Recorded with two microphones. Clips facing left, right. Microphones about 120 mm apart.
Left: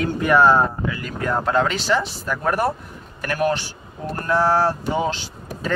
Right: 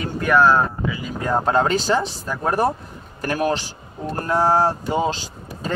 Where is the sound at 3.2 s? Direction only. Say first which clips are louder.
Even; 30° right (ahead or behind).